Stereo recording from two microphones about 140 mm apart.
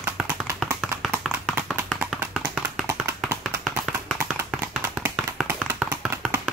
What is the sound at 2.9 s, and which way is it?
Tap, 20° right (ahead or behind).